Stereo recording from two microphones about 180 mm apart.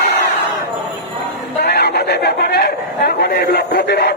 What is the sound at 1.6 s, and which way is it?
A man's voice, 65° left (ahead or behind).